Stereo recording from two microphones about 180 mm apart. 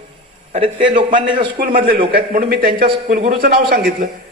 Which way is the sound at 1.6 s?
50° right (ahead or behind).